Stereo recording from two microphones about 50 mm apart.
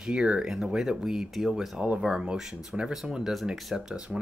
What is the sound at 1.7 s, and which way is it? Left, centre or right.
Speech, right.